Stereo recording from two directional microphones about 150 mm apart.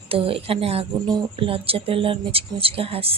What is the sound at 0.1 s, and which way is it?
Speech, 40° right (ahead or behind).